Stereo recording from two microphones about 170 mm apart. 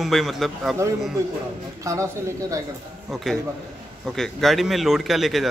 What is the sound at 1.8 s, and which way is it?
Speech, 20° right (ahead or behind).